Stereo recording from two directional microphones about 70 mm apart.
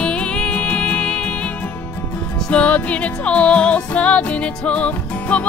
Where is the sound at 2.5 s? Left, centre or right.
Centre.